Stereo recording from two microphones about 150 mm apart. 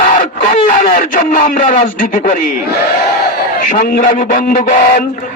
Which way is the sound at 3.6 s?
60° left (ahead or behind).